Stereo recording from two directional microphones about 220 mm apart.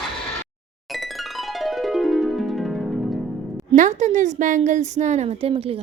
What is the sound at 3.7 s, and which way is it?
A woman's voice, 35° right (ahead or behind).